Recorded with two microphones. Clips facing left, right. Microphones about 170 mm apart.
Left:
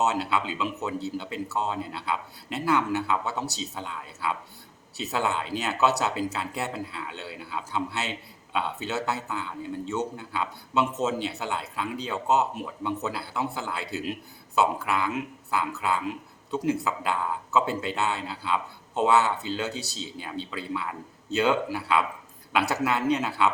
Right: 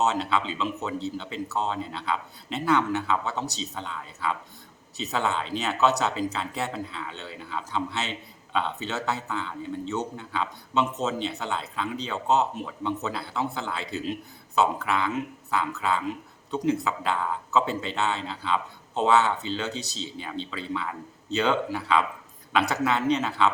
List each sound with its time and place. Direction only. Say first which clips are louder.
0.0 s speech: right 1 dB; 5° left (ahead or behind)